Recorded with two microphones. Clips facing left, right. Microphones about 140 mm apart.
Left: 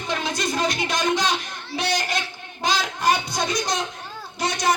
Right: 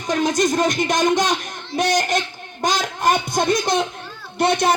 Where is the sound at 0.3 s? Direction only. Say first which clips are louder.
Right 6 dB; 45° right (ahead or behind).